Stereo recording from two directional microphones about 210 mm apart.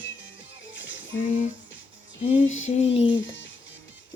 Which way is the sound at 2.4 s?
70° left (ahead or behind).